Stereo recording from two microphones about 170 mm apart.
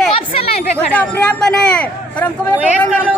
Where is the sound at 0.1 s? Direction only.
35° left (ahead or behind).